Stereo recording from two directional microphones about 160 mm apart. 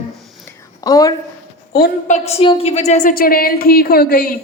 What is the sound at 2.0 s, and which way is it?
A woman's voice, 45° left (ahead or behind).